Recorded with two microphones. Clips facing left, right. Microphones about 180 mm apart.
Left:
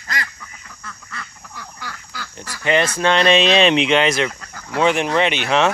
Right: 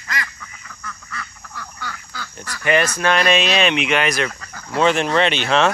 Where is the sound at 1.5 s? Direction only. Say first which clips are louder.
Right 2 dB; 10° left (ahead or behind).